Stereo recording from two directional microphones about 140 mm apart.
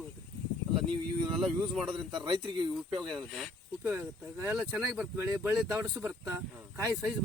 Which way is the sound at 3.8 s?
15° right (ahead or behind).